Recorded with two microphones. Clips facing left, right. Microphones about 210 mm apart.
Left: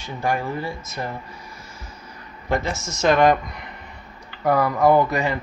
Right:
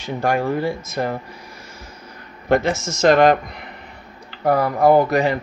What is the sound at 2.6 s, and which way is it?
Speech, 90° right.